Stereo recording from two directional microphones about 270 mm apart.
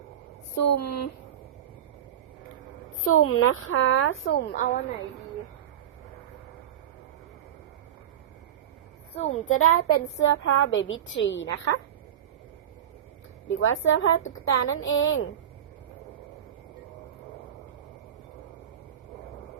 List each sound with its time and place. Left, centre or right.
0.5 s speech: left
3.0 s a woman's voice: left
9.1 s a child's voice: left
9.6 s a woman's voice: left
13.5 s a woman's voice: left